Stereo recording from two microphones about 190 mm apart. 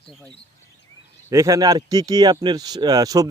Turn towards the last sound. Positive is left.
turn(degrees=-20)  # may be behind; listen again after turning